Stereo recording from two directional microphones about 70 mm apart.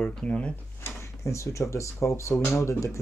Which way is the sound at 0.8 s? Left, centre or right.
Left.